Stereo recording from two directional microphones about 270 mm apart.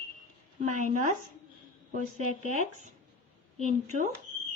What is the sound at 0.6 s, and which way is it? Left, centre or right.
Speech, right.